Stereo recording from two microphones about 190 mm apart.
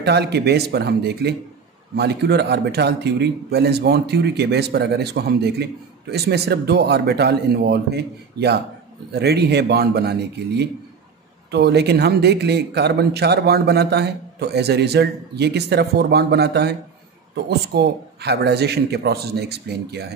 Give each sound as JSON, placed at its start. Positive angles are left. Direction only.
{"t": 0.0, "sound": "speech", "side_deg": -60}